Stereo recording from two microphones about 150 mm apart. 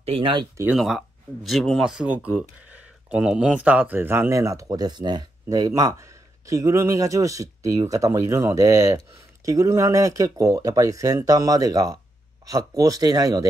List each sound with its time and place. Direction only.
0.0 s speech: 40° right (ahead or behind)
0.7 s speech: centre (ahead or behind); by 13.5 s 25° right (ahead or behind)